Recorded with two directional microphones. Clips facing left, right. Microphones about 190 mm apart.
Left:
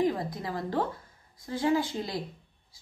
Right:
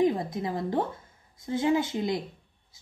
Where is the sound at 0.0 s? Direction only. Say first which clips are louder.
Right 3 dB; 25° right (ahead or behind).